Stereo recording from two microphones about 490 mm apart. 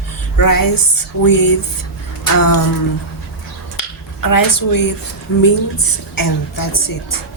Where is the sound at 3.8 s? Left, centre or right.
Left.